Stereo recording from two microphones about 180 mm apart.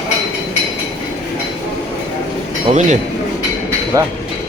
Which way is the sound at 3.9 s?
20° right (ahead or behind).